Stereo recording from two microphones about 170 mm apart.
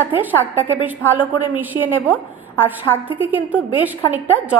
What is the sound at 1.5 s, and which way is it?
A woman's voice, 10° right (ahead or behind).